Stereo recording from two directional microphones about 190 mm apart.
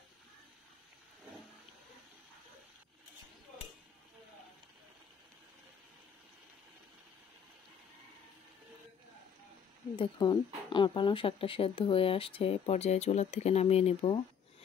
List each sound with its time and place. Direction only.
9.9 s speech: 25° left (ahead or behind)